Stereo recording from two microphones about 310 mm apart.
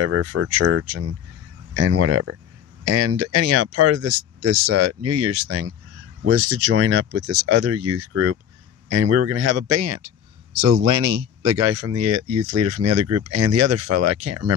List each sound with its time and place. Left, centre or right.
0.0 s speech: right